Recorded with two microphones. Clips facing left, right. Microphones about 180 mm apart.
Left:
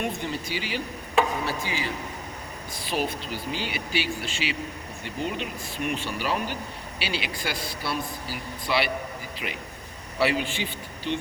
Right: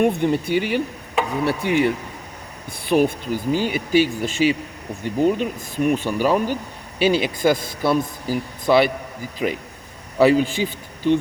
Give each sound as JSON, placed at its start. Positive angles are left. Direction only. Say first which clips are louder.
{"t": 0.0, "sound": "a man's voice", "louder": "right 12 dB", "side_deg": -55}
{"t": 10.2, "sound": "a man's voice", "louder": "right 10 dB", "side_deg": -40}